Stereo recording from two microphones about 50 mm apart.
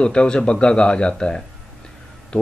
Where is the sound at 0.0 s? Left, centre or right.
Centre.